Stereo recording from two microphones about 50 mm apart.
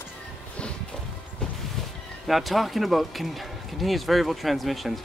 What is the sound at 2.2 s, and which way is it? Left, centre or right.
Speech, centre.